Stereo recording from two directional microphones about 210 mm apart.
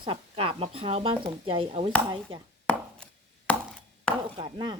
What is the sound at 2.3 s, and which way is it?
Chopping, 70° right (ahead or behind).